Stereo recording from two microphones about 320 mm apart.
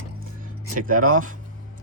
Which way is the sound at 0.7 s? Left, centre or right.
Right.